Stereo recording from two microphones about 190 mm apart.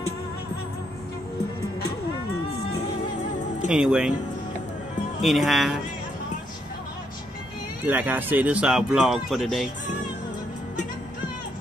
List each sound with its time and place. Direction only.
3.6 s speech: 5° right (ahead or behind)
5.2 s speech: centre (ahead or behind)
7.8 s speech: 10° right (ahead or behind)